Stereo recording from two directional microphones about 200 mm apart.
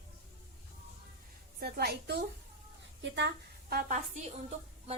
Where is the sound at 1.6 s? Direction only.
55° right (ahead or behind).